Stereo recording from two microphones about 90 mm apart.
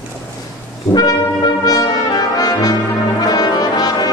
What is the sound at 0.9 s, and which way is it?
Brass instrument, 45° left (ahead or behind).